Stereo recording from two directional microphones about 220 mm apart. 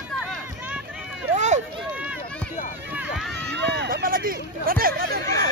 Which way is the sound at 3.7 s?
50° right (ahead or behind).